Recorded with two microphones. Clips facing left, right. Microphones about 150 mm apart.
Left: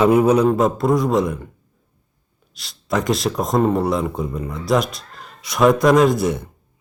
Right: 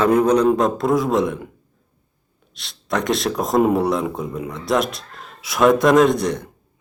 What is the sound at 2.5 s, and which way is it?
A man's voice, centre (ahead or behind).